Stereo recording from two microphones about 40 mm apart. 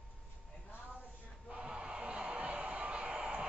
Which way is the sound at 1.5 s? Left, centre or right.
Right.